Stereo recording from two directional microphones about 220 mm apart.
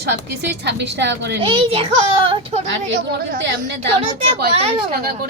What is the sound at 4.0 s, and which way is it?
Speech, 25° right (ahead or behind).